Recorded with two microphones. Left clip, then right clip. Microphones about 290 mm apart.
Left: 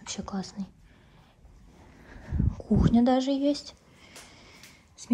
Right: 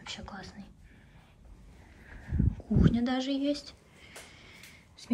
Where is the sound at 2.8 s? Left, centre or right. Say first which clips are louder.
Left 6 dB; centre.